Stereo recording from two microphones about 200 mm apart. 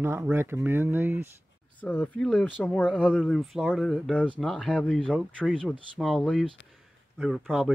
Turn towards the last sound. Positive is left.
turn(degrees=0)  # may be behind; listen again after turning